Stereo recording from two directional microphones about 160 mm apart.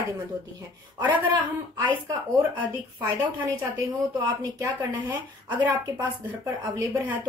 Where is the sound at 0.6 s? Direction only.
25° right (ahead or behind).